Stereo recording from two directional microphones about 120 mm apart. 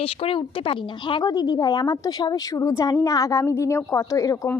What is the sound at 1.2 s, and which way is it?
A woman's voice, 30° left (ahead or behind).